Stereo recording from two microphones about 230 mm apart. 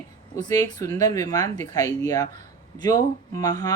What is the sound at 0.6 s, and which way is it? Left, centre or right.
Speech, centre.